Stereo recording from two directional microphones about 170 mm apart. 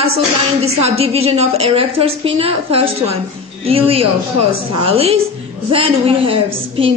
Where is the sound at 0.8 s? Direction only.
35° right (ahead or behind).